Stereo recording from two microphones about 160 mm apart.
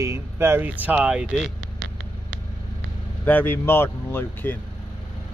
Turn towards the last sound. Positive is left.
turn(degrees=15)  # may be behind; listen again after turning